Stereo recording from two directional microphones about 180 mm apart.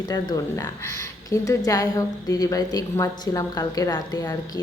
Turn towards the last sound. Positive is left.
turn(degrees=20)  # may be behind; listen again after turning